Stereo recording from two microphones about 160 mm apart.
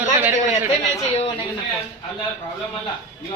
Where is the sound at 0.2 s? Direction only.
10° right (ahead or behind).